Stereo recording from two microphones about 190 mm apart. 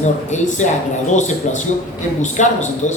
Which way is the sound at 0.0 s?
40° left (ahead or behind).